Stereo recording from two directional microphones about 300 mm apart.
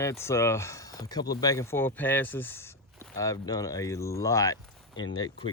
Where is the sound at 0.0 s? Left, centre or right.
Centre.